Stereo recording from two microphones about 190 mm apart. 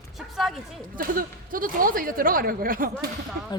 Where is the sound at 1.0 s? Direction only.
50° right (ahead or behind).